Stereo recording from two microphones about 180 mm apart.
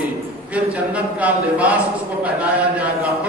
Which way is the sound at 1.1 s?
10° right (ahead or behind).